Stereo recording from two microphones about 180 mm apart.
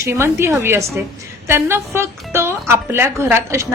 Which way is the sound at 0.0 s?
15° right (ahead or behind).